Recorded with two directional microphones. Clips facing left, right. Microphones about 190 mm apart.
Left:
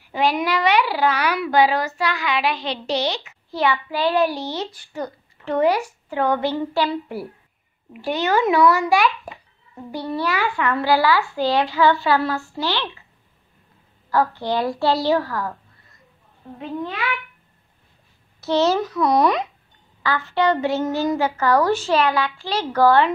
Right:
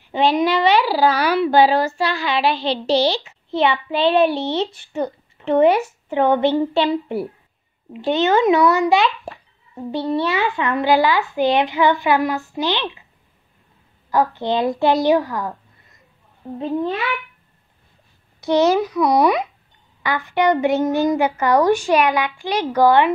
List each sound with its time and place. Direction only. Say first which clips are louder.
0.0 s a child's voice: right 4 dB; 25° right (ahead or behind)
14.1 s a child's voice: right 2 dB; 20° right (ahead or behind)
16.5 s a child's voice: right 6 dB; 35° right (ahead or behind)
18.4 s a woman's voice: right 3 dB; 15° right (ahead or behind)